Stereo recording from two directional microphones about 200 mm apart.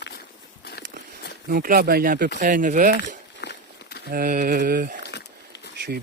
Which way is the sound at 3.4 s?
55° left (ahead or behind).